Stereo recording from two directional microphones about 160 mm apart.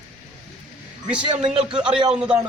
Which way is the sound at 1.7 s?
5° right (ahead or behind).